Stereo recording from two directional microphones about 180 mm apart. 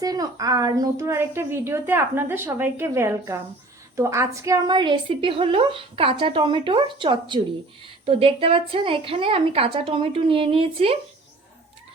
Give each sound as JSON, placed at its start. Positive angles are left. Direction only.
{"t": 0.0, "sound": "a woman's voice", "side_deg": -20}